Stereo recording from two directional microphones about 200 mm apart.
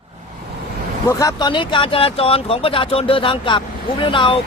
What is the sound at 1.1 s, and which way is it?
Speech, 15° left (ahead or behind).